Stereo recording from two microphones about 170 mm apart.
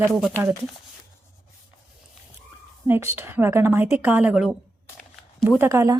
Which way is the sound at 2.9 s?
15° right (ahead or behind).